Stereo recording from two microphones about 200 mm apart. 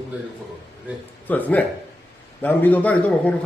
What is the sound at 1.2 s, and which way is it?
A man's voice, 10° left (ahead or behind).